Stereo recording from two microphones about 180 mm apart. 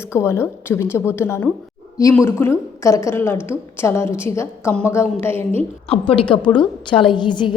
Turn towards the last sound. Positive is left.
turn(degrees=25)  # may be behind; listen again after turning